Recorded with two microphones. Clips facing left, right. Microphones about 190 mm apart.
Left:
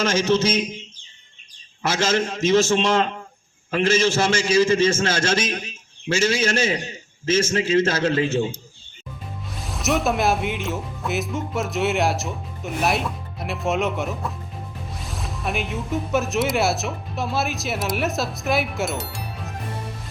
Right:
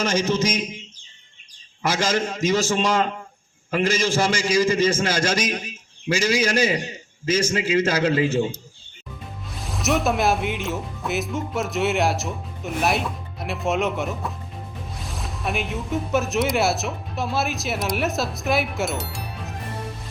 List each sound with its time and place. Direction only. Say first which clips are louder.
0.0 s a man's voice: left 2 dB; 15° right (ahead or behind)
1.8 s a man's voice: left 1 dB; 10° right (ahead or behind)
9.5 s speech: even; centre (ahead or behind)